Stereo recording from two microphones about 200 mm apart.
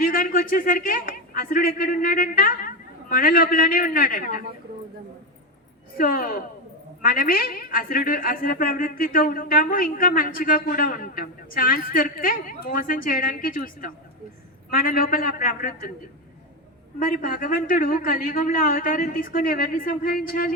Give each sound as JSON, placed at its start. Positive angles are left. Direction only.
{"t": 0.0, "sound": "speech", "side_deg": 45}
{"t": 6.0, "sound": "a woman's voice", "side_deg": 45}
{"t": 17.0, "sound": "a woman's voice", "side_deg": 45}